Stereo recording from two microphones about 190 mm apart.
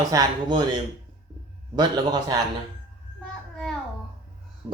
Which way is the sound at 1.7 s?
20° right (ahead or behind).